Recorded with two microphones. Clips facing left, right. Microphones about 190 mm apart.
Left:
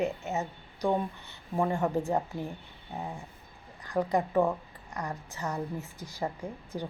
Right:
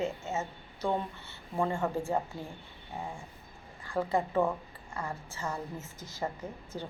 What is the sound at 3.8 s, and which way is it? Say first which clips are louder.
A woman's voice: left 2 dB; 15° left (ahead or behind).